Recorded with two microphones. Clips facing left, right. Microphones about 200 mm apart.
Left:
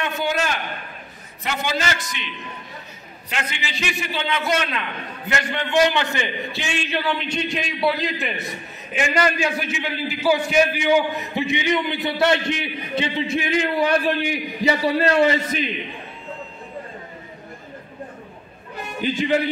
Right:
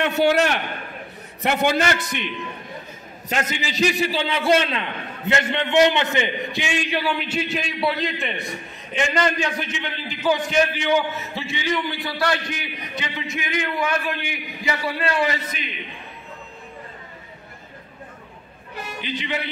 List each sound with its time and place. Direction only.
0.0 s a man's voice: 70° right (ahead or behind)
3.3 s a man's voice: 40° right (ahead or behind); by 15.6 s 30° left (ahead or behind)
18.9 s a man's voice: 45° left (ahead or behind)